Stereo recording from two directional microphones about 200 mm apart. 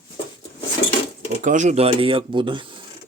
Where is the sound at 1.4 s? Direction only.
40° right (ahead or behind).